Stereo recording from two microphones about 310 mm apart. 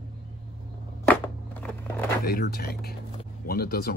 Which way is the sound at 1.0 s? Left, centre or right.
Centre.